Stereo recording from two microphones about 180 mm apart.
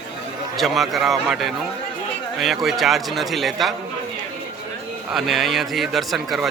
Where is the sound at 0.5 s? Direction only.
Centre (ahead or behind).